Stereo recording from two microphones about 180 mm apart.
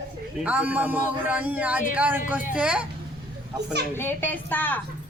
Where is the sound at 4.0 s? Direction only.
10° left (ahead or behind).